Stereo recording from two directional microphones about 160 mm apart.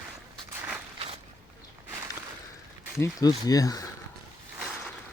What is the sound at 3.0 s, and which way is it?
Speech, 25° left (ahead or behind).